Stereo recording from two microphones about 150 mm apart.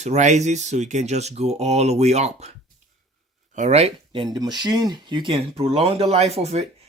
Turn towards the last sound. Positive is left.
turn(degrees=-45)  # may be behind; listen again after turning